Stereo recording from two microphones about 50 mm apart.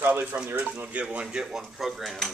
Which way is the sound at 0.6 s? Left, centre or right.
Right.